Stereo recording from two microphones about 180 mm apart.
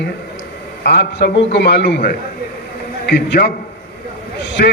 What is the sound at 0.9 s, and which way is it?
A man's voice, 65° left (ahead or behind).